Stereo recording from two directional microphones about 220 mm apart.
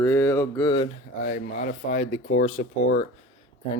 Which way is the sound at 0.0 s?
15° left (ahead or behind).